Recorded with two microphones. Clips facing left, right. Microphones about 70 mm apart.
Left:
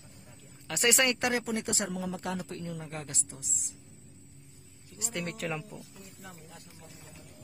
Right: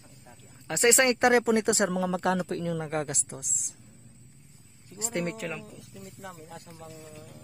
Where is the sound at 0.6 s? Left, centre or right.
Right.